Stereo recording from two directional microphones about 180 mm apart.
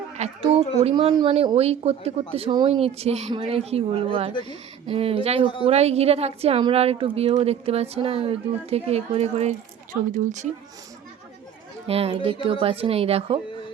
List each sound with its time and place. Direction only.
0.2 s a woman's voice: 30° right (ahead or behind)
4.3 s speech: 25° left (ahead or behind)
4.9 s a woman's voice: 30° right (ahead or behind)
11.9 s a woman's voice: 35° right (ahead or behind)